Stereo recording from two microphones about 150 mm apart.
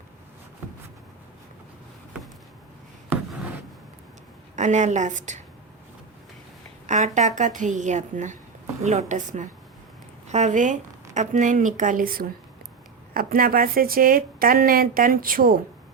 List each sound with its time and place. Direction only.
4.5 s a woman's voice: 50° right (ahead or behind)
6.8 s a woman's voice: 55° right (ahead or behind); by 15.5 s 70° right (ahead or behind)